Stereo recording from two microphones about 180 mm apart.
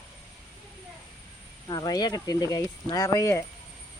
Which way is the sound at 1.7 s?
20° left (ahead or behind).